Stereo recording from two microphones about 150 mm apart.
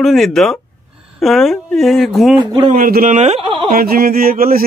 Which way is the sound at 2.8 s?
70° right (ahead or behind).